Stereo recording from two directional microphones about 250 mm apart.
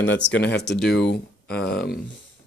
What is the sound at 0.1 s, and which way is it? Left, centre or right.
Speech, left.